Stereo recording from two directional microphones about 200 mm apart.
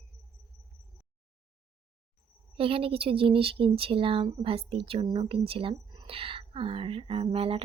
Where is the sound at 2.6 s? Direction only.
25° right (ahead or behind).